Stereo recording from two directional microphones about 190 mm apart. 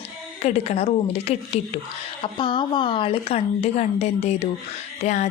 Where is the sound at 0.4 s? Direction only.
35° left (ahead or behind).